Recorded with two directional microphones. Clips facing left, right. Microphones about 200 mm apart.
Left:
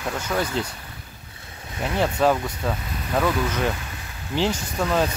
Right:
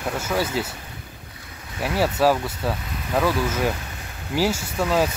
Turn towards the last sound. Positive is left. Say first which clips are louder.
# right 1 dB
turn(degrees=-5)  # may be behind; listen again after turning